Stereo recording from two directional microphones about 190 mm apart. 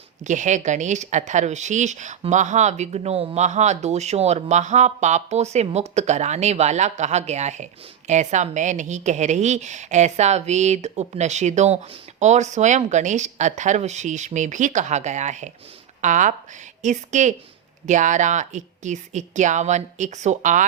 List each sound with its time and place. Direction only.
0.3 s speech: 40° right (ahead or behind)